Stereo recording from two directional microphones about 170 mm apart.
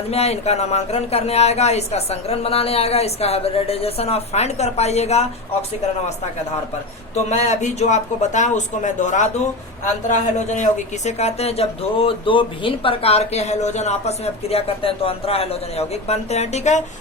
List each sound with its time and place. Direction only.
0.1 s a woman's voice: 40° left (ahead or behind)
7.3 s a woman's voice: 40° left (ahead or behind)